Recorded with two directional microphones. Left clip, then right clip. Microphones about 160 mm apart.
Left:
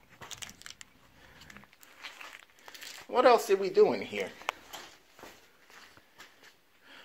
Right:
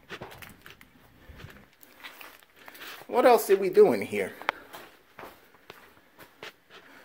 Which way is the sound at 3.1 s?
40° right (ahead or behind).